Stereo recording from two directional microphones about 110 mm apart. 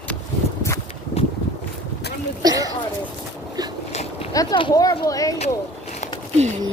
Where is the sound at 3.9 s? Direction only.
75° left (ahead or behind).